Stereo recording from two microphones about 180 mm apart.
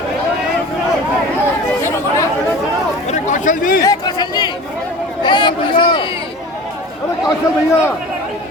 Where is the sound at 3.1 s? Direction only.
45° left (ahead or behind).